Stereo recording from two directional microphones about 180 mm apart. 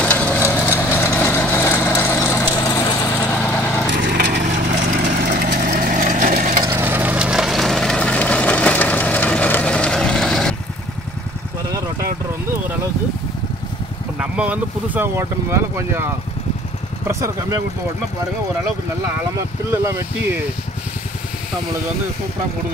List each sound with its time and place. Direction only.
0.0 s vehicle: 5° left (ahead or behind)
3.9 s lawn mower: 70° right (ahead or behind)
4.4 s vehicle: 45° right (ahead or behind)
6.6 s vehicle: 10° right (ahead or behind); by 10.5 s 5° left (ahead or behind)
14.2 s speech: 5° right (ahead or behind)
17.1 s speech: 15° right (ahead or behind)